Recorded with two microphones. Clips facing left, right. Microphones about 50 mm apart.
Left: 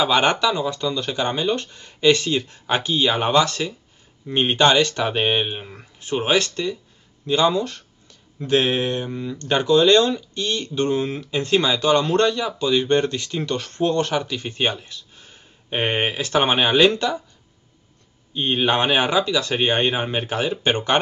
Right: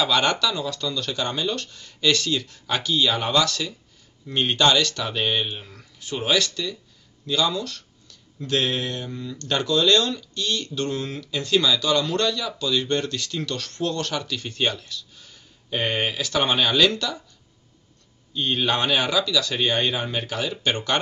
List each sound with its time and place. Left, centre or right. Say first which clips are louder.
0.0 s speech: left 3 dB; left
18.3 s speech: left 3 dB; left